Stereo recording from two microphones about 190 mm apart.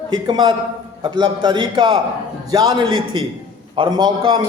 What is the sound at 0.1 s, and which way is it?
A man's voice, 25° right (ahead or behind).